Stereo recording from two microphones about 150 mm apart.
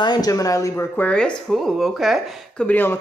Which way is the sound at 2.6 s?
15° left (ahead or behind).